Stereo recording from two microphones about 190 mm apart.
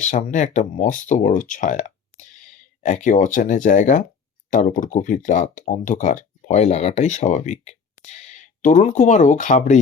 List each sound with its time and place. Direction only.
0.0 s speech: 40° left (ahead or behind)